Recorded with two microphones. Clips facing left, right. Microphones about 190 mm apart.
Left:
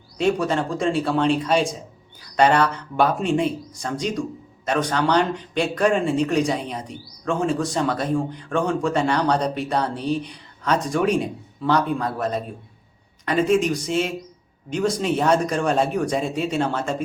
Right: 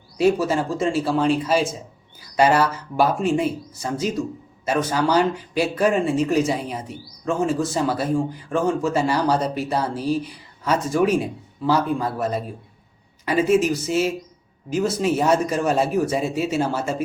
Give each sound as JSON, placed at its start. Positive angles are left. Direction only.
{"t": 0.2, "sound": "speech", "side_deg": -5}